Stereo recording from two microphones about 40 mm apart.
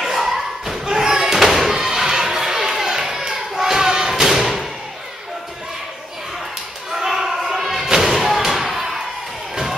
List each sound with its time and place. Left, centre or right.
0.0 s thump: centre
6.9 s thump: centre
8.4 s thump: centre